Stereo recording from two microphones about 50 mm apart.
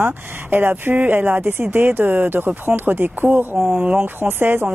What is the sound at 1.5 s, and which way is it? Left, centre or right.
Speech, right.